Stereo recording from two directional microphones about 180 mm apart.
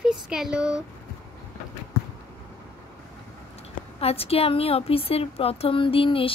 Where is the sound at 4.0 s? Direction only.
35° left (ahead or behind).